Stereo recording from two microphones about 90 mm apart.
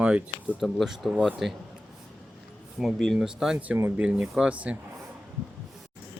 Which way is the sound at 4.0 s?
10° right (ahead or behind).